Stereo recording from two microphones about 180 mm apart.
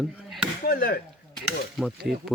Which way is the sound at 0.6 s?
55° left (ahead or behind).